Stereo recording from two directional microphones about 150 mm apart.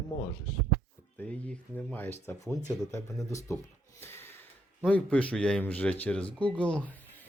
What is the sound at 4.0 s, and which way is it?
Snort, 15° left (ahead or behind).